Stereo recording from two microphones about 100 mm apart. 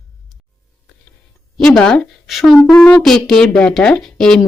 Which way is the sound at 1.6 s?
5° left (ahead or behind).